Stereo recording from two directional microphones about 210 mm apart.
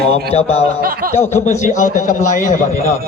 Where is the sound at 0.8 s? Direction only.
45° right (ahead or behind).